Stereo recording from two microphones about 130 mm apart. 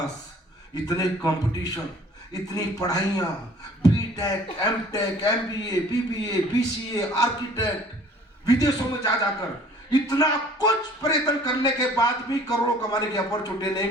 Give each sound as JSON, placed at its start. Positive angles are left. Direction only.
{"t": 0.7, "sound": "speech", "side_deg": 30}